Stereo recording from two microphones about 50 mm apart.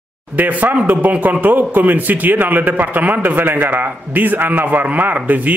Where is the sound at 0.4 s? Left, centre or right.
Right.